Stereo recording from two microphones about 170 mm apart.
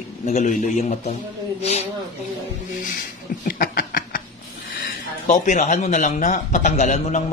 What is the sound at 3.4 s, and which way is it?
Snicker, 55° left (ahead or behind).